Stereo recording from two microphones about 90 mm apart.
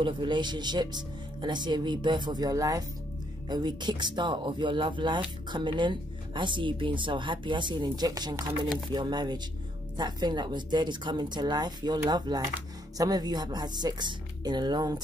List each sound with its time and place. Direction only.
0.0 s speech: 60° right (ahead or behind); by 2.8 s 40° right (ahead or behind)
3.4 s speech: 55° right (ahead or behind)